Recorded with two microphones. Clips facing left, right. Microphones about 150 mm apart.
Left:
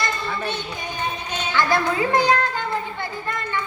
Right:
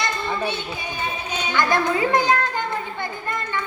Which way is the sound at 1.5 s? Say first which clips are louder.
Even; 20° right (ahead or behind).